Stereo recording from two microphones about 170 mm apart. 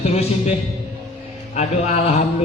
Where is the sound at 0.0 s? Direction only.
40° left (ahead or behind).